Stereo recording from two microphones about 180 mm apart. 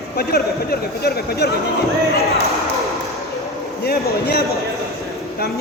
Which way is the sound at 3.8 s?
60° left (ahead or behind).